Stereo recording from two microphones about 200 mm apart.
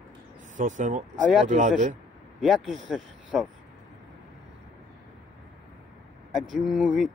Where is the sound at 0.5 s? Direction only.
40° right (ahead or behind).